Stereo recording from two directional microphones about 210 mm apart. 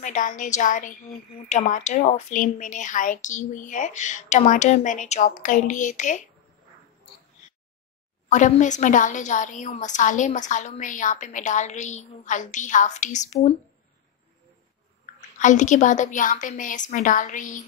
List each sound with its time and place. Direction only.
0.0 s a woman's voice: 35° left (ahead or behind)
8.3 s a woman's voice: 35° left (ahead or behind)
15.1 s a woman's voice: 35° left (ahead or behind)